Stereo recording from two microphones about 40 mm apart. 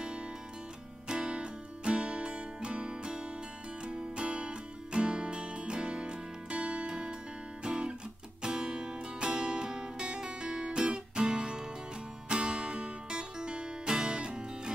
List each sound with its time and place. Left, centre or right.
1.0 s music: right
7.6 s guitar: right
8.4 s music: right